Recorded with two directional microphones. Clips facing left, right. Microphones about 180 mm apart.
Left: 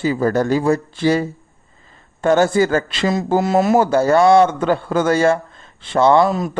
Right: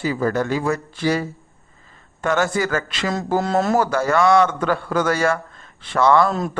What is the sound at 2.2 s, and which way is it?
Speech, 35° left (ahead or behind).